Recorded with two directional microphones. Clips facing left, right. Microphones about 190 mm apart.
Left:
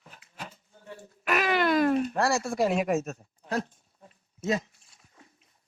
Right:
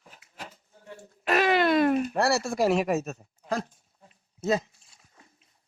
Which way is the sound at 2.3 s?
85° right.